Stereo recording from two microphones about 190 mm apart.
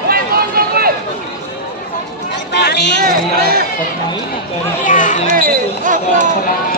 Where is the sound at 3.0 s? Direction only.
55° right (ahead or behind).